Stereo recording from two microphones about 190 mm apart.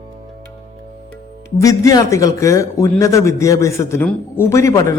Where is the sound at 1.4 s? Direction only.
15° left (ahead or behind).